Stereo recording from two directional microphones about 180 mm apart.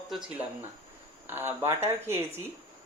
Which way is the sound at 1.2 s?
10° right (ahead or behind).